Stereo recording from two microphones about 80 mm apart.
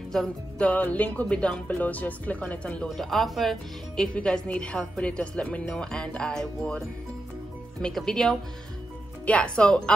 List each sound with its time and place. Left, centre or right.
0.1 s music: centre
0.7 s speech: centre
3.0 s speech: centre
7.8 s speech: centre